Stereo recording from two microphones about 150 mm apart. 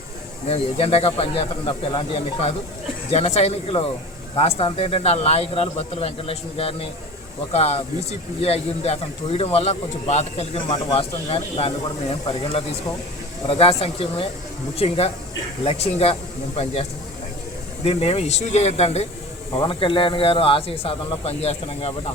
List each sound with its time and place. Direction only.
0.4 s speech: 40° left (ahead or behind)
17.8 s speech: 40° left (ahead or behind)